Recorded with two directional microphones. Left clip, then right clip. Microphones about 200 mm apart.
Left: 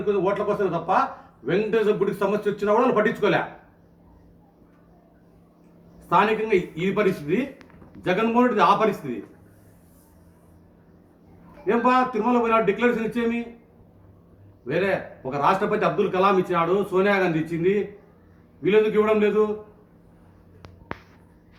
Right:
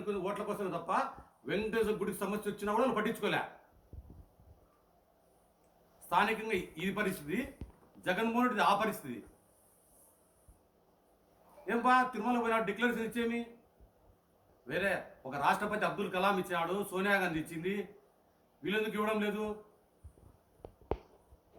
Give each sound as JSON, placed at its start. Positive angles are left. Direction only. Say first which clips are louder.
{"t": 0.0, "sound": "a man's voice", "louder": "left 14 dB", "side_deg": -15}
{"t": 6.1, "sound": "a man's voice", "louder": "left 11 dB", "side_deg": -20}
{"t": 11.6, "sound": "a man's voice", "louder": "left 9 dB", "side_deg": -20}
{"t": 14.7, "sound": "a man's voice", "louder": "left 10 dB", "side_deg": -15}
{"t": 18.6, "sound": "a man's voice", "louder": "left 15 dB", "side_deg": -15}